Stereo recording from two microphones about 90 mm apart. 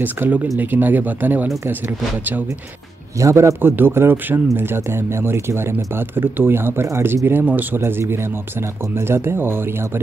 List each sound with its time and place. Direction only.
0.0 s speech: 20° right (ahead or behind)
3.2 s a man's voice: 35° right (ahead or behind)
3.6 s speech: 25° right (ahead or behind)